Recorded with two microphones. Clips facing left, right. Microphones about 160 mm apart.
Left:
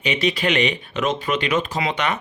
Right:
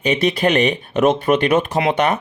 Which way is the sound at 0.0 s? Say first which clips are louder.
Right 5 dB; 50° right (ahead or behind).